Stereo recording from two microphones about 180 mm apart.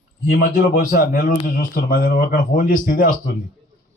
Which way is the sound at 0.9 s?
50° left (ahead or behind).